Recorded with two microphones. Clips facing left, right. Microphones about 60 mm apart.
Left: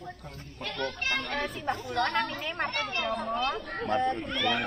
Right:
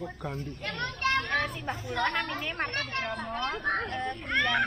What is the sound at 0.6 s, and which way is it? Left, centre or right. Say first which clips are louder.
Speech: right 1 dB; right.